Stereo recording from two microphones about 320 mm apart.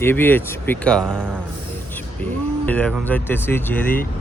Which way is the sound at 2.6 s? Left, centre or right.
Centre.